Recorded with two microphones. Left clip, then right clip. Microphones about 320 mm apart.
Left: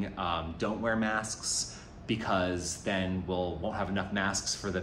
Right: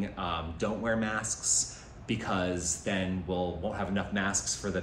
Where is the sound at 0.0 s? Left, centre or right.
Centre.